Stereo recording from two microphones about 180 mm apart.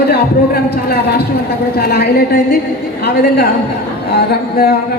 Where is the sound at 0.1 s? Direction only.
60° left (ahead or behind).